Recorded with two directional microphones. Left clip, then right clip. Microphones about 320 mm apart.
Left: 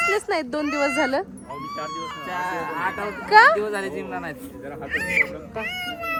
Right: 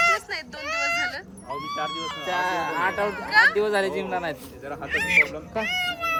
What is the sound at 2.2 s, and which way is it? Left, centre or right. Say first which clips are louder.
Speech: right 3 dB; right.